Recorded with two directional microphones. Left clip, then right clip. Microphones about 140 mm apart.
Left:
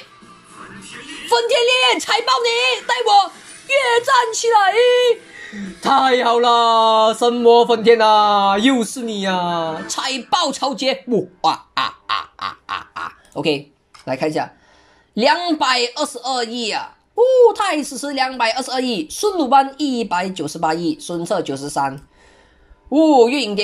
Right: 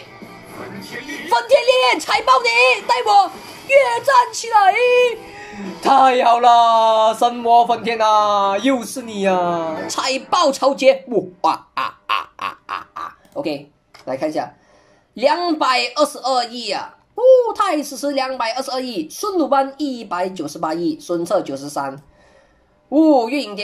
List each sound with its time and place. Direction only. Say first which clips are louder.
0.3 s music: right 5 dB; 40° right (ahead or behind)
1.3 s a woman's voice: right 1 dB; 5° left (ahead or behind); by 12.7 s 15° right (ahead or behind)
12.7 s a sound: left 1 dB; 5° left (ahead or behind)
14.0 s a woman's voice: left 1 dB; 5° left (ahead or behind)
22.9 s a woman's voice: left 2 dB; centre (ahead or behind)